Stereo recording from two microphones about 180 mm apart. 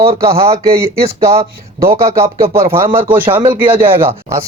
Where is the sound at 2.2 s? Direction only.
35° right (ahead or behind).